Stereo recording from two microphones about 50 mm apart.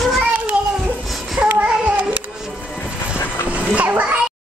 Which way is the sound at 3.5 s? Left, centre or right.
Right.